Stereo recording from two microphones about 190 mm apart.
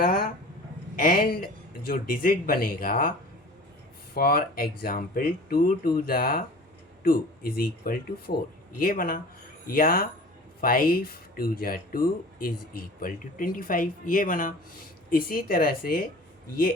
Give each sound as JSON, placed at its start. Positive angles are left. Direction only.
{"t": 0.0, "sound": "a sound", "side_deg": 50}
{"t": 0.9, "sound": "speech", "side_deg": 50}
{"t": 4.1, "sound": "speech", "side_deg": 55}